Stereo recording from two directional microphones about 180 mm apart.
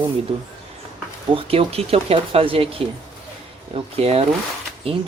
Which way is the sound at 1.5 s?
35° right (ahead or behind).